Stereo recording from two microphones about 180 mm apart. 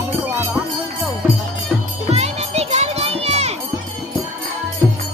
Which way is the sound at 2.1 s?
35° right (ahead or behind).